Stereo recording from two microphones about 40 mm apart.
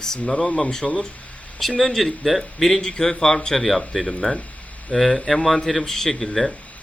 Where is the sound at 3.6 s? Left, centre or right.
Centre.